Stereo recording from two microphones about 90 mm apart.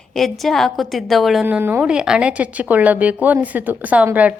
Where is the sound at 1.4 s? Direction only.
20° right (ahead or behind).